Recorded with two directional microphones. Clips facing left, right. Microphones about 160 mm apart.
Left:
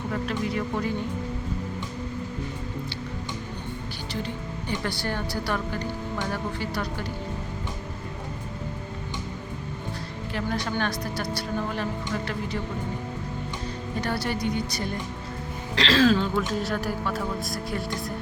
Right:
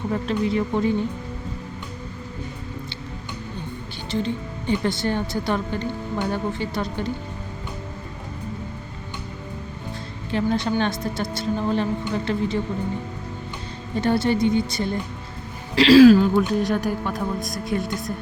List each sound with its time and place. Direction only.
0.1 s speech: 25° right (ahead or behind)
4.1 s speech: 25° right (ahead or behind)
10.3 s speech: 25° right (ahead or behind)
14.0 s speech: 25° right (ahead or behind)
15.7 s speech: 10° right (ahead or behind)